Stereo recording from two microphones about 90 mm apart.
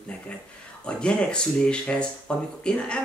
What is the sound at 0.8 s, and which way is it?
Speech, 10° left (ahead or behind).